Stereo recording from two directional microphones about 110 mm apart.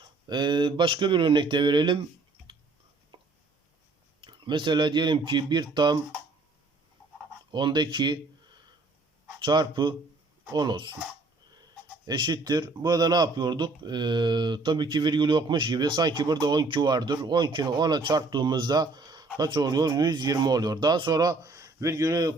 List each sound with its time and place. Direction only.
0.3 s a man's voice: 45° right (ahead or behind)
3.1 s a sound: 50° right (ahead or behind)
4.2 s a man's voice: 45° right (ahead or behind)
7.5 s a man's voice: 45° right (ahead or behind)
9.4 s speech: 40° right (ahead or behind)
12.0 s a man's voice: 40° right (ahead or behind)